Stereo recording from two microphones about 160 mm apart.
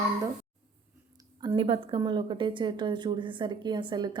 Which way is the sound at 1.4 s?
30° right (ahead or behind).